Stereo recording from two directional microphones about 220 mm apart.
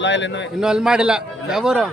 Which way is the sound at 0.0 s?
55° left (ahead or behind).